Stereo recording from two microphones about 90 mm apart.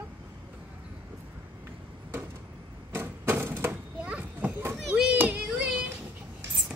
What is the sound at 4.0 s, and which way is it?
Children playing, 15° right (ahead or behind).